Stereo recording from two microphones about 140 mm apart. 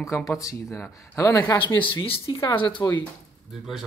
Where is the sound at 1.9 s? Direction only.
40° left (ahead or behind).